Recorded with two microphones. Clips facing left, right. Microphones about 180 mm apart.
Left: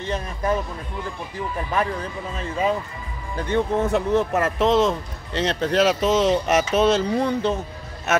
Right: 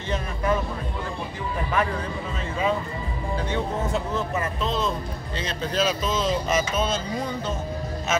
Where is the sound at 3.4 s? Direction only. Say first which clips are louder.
Left 8 dB; 60° left (ahead or behind).